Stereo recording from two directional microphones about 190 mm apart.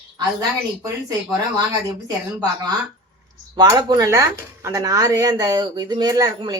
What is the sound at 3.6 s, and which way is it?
Speech, 20° right (ahead or behind).